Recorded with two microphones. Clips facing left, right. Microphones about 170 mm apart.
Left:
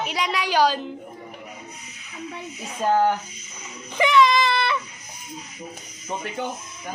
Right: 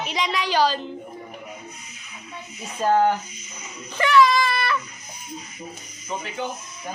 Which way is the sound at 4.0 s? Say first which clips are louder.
Even; 20° left (ahead or behind).